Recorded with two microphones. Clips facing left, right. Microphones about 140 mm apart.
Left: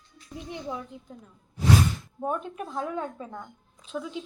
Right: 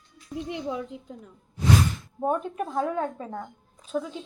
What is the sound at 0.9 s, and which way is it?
Speech, 90° right.